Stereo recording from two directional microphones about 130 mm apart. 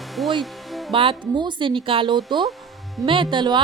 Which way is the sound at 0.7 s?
Centre (ahead or behind).